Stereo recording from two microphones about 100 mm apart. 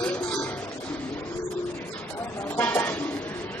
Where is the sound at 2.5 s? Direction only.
20° left (ahead or behind).